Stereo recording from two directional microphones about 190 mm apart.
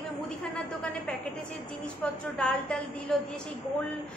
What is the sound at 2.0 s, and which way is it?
A woman's voice, 5° left (ahead or behind).